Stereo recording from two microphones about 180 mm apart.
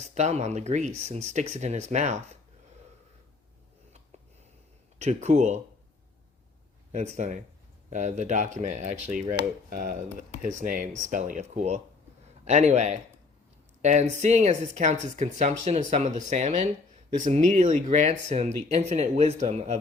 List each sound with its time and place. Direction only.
0.0 s speech: 40° right (ahead or behind)
4.9 s speech: 40° right (ahead or behind)
6.9 s speech: 40° right (ahead or behind)
9.4 s speech: 55° right (ahead or behind)